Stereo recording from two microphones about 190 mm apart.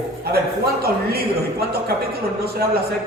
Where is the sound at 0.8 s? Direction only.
55° right (ahead or behind).